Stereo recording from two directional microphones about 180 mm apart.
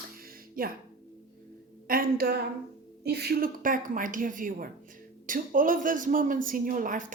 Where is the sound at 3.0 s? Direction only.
65° right (ahead or behind).